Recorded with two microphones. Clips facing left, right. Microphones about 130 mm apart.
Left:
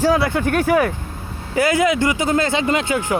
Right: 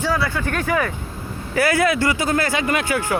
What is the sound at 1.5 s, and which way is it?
Speech, 20° left (ahead or behind).